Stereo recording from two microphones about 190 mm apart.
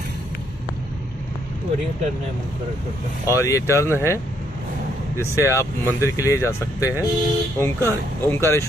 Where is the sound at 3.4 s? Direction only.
15° left (ahead or behind).